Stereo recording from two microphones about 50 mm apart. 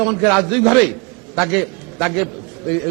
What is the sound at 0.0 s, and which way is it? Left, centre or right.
A man's voice, centre.